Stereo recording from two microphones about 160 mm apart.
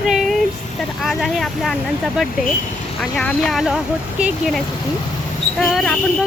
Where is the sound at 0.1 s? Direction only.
Centre (ahead or behind).